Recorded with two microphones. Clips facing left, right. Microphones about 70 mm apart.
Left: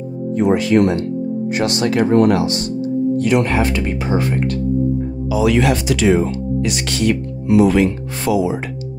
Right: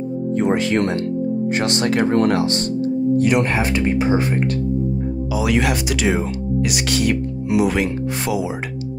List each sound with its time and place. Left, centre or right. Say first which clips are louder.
0.3 s speech: left 4 dB; right
3.2 s speech: left 3 dB; right
5.3 s speech: left 5 dB; centre